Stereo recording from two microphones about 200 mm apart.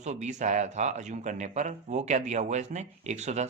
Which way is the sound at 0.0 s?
35° right (ahead or behind).